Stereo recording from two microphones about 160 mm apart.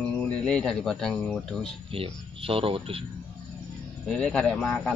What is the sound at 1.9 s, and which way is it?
Speech, 35° right (ahead or behind).